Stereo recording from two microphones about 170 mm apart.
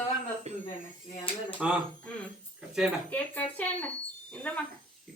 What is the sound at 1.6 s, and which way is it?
Speech, 5° right (ahead or behind).